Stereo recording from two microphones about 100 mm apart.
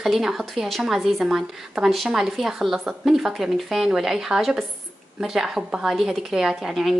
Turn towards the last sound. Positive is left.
turn(degrees=0)  # may be behind; listen again after turning